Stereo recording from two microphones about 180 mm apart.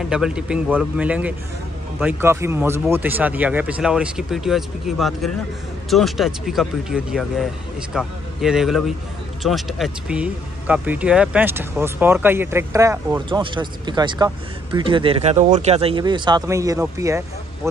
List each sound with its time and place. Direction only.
0.0 s speech: 5° right (ahead or behind)
13.3 s speech: 25° right (ahead or behind)